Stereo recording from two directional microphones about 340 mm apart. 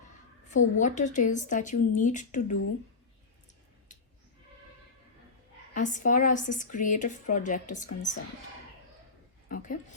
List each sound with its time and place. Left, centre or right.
0.4 s a woman's voice: left
5.7 s a woman's voice: left
9.5 s a sound: left